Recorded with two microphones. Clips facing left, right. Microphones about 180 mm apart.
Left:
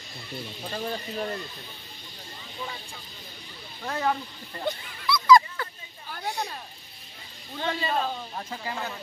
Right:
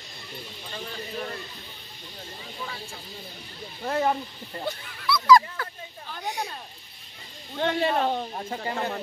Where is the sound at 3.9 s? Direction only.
25° right (ahead or behind).